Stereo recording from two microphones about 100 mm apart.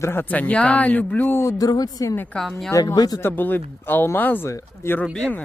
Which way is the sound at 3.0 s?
40° left (ahead or behind).